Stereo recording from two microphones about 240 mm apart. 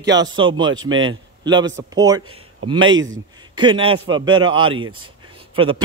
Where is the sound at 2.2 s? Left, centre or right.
Right.